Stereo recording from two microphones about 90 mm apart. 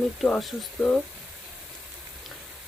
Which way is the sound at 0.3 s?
Centre (ahead or behind).